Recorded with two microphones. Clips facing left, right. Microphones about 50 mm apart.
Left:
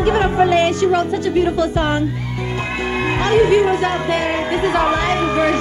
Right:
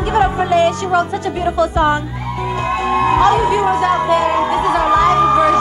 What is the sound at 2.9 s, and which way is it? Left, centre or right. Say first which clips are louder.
Music: right 5 dB; left.